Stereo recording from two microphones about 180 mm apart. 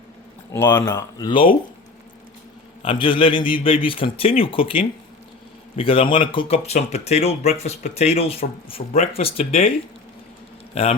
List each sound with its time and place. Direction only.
0.5 s speech: 15° left (ahead or behind)
2.8 s a man's voice: 30° left (ahead or behind)
10.8 s speech: 35° left (ahead or behind)